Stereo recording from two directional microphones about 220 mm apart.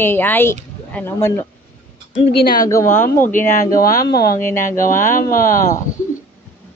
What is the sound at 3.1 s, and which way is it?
Speech, 40° left (ahead or behind).